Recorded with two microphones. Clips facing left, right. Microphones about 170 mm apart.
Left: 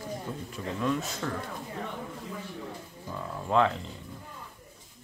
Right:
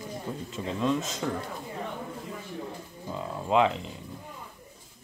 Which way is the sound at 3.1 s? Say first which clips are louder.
Right 1 dB; 15° right (ahead or behind).